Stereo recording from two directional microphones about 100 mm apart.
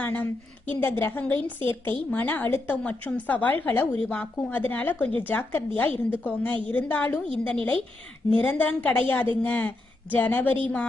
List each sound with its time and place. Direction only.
0.0 s a woman's voice: 15° left (ahead or behind)